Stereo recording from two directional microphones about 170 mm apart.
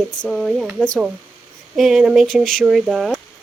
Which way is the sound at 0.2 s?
Centre (ahead or behind).